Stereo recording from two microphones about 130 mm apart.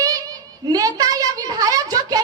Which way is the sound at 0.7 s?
30° right (ahead or behind).